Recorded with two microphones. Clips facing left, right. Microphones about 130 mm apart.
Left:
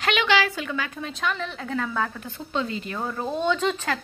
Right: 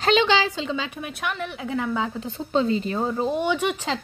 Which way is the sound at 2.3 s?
30° right (ahead or behind).